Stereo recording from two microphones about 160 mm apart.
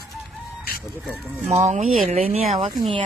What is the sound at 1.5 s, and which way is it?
Speech, 45° right (ahead or behind).